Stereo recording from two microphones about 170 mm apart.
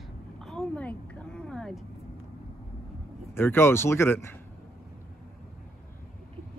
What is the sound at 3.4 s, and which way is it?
Speech, 15° left (ahead or behind).